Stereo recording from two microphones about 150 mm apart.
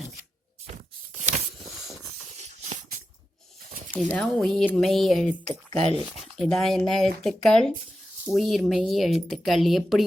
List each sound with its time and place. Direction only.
1.6 s hiss: centre (ahead or behind)
3.9 s speech: 10° left (ahead or behind)
5.5 s speech: 40° right (ahead or behind)
6.3 s speech: centre (ahead or behind)